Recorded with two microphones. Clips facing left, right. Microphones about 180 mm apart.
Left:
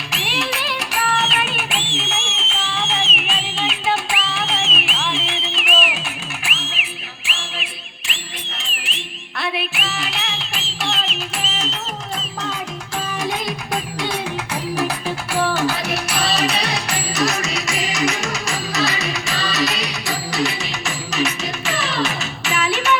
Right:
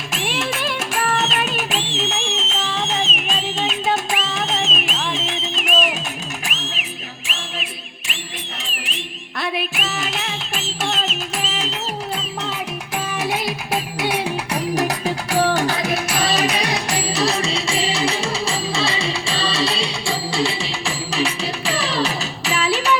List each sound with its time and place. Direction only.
0.1 s music: 50° right (ahead or behind)
13.1 s music: 5° right (ahead or behind)
14.8 s music: 40° right (ahead or behind)
16.5 s music: 15° right (ahead or behind)
17.1 s music: 30° right (ahead or behind)